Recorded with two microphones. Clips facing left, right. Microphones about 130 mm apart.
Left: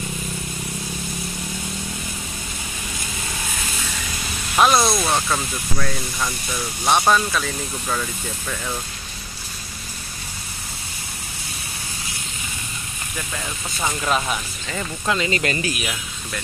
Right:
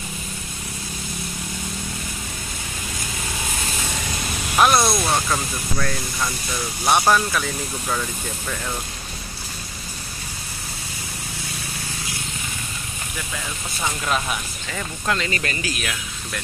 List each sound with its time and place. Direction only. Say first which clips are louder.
4.6 s speech: left 1 dB; centre (ahead or behind)
14.0 s speech: left 2 dB; centre (ahead or behind)
15.2 s speech: left 4 dB; 30° left (ahead or behind)
15.8 s speech: left 1 dB; 5° left (ahead or behind)